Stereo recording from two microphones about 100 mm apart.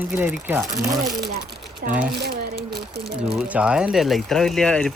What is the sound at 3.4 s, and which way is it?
Speech, 10° right (ahead or behind).